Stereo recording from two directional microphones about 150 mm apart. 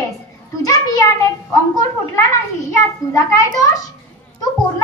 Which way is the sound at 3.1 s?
20° left (ahead or behind).